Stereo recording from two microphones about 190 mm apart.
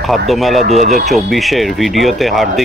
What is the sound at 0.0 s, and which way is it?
Speech, centre (ahead or behind).